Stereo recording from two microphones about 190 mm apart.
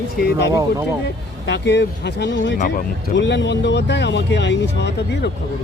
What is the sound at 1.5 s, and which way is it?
Speech, 65° left (ahead or behind).